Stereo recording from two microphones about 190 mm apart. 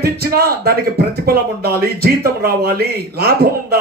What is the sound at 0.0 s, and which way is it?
Speech, 55° right (ahead or behind).